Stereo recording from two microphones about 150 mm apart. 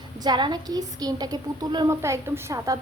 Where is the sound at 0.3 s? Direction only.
30° right (ahead or behind).